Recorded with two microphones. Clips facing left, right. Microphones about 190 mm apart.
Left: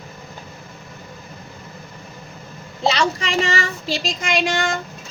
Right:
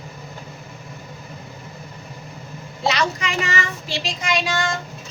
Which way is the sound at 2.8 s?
30° left (ahead or behind).